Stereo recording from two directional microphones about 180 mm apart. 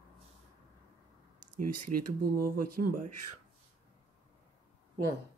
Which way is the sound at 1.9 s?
45° right (ahead or behind).